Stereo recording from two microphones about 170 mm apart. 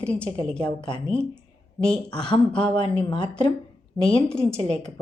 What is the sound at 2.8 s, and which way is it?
Speech, 30° left (ahead or behind).